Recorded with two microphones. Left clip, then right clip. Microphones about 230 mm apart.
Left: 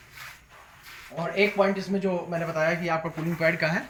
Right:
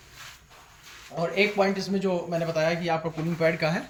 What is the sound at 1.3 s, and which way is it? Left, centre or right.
Speech, right.